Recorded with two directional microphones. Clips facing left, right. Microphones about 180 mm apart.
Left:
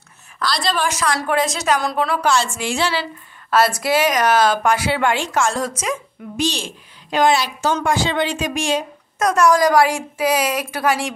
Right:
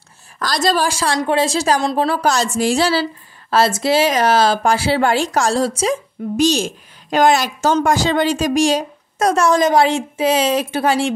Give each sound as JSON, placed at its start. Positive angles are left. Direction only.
{"t": 0.4, "sound": "a woman's voice", "side_deg": -45}